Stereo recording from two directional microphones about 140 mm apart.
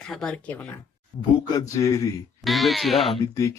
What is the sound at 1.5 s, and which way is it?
Speech, 25° left (ahead or behind).